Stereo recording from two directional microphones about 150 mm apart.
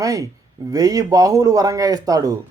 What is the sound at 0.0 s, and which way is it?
Speech, 25° right (ahead or behind).